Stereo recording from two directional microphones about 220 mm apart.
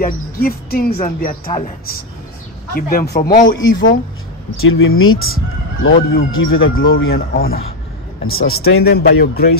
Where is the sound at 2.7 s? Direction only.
40° left (ahead or behind).